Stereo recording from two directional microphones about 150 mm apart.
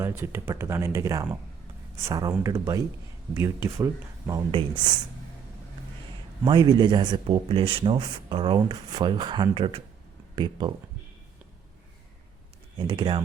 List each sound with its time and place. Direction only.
0.0 s speech: 15° right (ahead or behind)
4.5 s speech: 30° right (ahead or behind)
6.4 s speech: 30° right (ahead or behind)
12.7 s speech: 35° right (ahead or behind)